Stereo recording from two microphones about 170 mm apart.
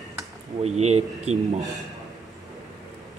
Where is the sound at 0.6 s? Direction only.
40° right (ahead or behind).